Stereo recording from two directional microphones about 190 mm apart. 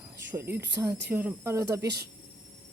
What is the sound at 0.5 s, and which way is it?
Speech, 65° right (ahead or behind).